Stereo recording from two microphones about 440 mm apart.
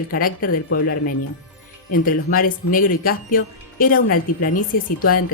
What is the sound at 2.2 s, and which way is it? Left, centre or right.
Speech, centre.